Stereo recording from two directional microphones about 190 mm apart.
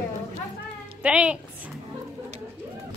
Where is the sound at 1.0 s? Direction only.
5° right (ahead or behind).